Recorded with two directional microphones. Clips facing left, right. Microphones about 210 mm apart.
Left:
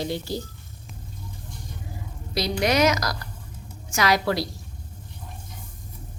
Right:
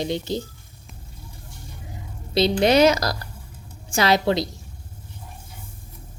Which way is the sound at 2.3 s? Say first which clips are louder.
Right 5 dB; 25° right (ahead or behind).